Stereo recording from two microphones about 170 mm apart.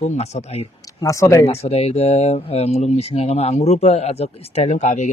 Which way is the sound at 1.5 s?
35° left (ahead or behind).